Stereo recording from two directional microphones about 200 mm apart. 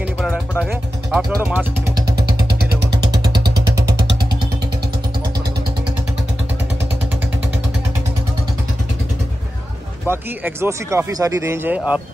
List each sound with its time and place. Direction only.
0.2 s vehicle: centre (ahead or behind)
2.1 s vehicle: 50° right (ahead or behind)
3.0 s vehicle: 20° right (ahead or behind)
10.0 s speech: 10° right (ahead or behind)